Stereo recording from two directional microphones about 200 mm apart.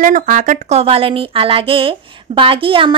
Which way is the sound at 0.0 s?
40° right (ahead or behind).